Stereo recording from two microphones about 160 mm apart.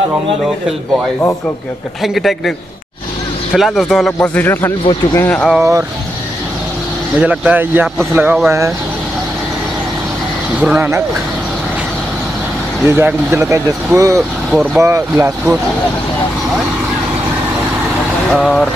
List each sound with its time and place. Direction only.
2.0 s a man's voice: centre (ahead or behind)
3.5 s speech: centre (ahead or behind)
5.6 s speech: 15° right (ahead or behind)
7.2 s speech: 10° right (ahead or behind)
10.6 s speech: 10° right (ahead or behind)
12.8 s speech: 15° right (ahead or behind)
14.5 s speech: 10° right (ahead or behind)
18.3 s a man's voice: 5° left (ahead or behind)